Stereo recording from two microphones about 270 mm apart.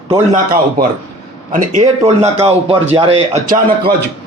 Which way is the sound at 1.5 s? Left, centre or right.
Right.